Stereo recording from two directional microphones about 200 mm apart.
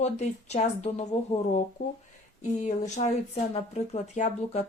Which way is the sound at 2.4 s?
35° left (ahead or behind).